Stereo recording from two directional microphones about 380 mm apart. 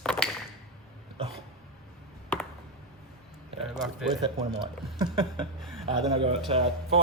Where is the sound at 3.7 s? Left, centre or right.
Centre.